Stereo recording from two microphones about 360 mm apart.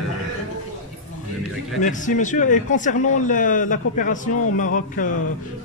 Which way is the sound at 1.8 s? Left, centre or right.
Left.